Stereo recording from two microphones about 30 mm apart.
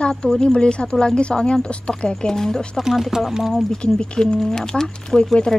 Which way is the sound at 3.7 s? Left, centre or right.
Left.